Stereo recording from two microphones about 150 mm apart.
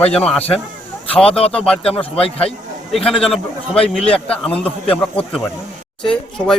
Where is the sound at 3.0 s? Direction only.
5° left (ahead or behind).